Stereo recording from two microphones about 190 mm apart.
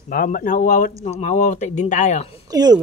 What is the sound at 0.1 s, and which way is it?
Speech, 45° left (ahead or behind).